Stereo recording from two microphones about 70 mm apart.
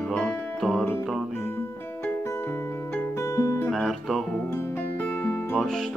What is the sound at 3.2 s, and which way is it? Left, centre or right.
Music, left.